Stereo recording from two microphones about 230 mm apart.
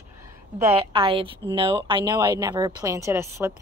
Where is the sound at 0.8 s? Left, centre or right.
Right.